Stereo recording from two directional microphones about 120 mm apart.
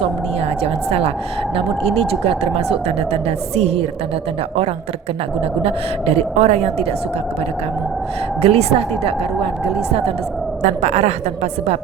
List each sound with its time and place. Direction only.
0.6 s a woman's voice: 55° right (ahead or behind)
5.6 s a woman's voice: 60° right (ahead or behind)
8.4 s a woman's voice: 55° right (ahead or behind)
10.6 s a woman's voice: 70° right (ahead or behind)